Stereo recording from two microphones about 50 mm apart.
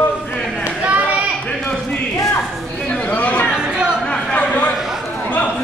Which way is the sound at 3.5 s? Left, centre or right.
Centre.